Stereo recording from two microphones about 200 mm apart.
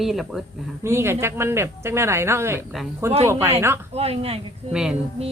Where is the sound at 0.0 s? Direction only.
Centre (ahead or behind).